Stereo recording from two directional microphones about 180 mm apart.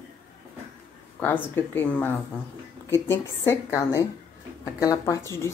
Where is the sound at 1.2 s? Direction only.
10° left (ahead or behind).